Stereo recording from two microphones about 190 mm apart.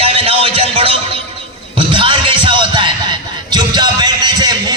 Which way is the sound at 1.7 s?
25° right (ahead or behind).